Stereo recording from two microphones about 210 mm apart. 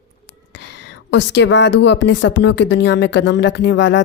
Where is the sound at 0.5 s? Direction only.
55° left (ahead or behind).